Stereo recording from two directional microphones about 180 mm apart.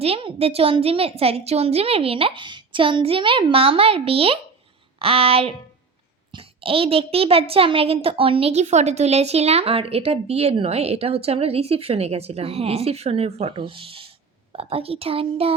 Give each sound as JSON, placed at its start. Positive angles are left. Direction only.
{"t": 0.0, "sound": "a child's voice", "side_deg": -30}